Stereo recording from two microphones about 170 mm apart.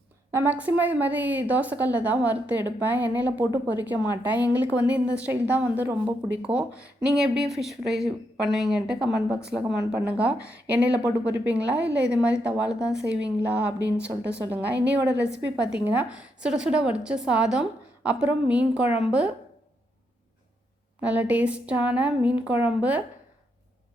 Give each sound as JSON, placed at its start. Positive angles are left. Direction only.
{"t": 0.3, "sound": "a woman's voice", "side_deg": -15}
{"t": 15.1, "sound": "a woman's voice", "side_deg": -90}
{"t": 15.7, "sound": "a woman's voice", "side_deg": -10}
{"t": 21.0, "sound": "a woman's voice", "side_deg": -10}